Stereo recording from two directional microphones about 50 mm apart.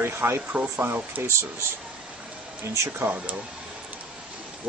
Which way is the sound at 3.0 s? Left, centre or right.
Right.